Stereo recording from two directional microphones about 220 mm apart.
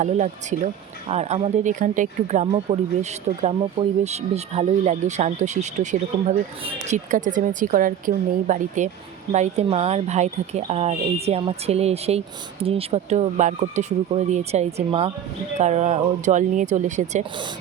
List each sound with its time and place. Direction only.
0.0 s speech: 35° right (ahead or behind)